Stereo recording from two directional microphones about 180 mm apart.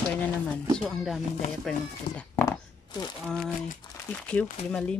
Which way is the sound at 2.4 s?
20° left (ahead or behind).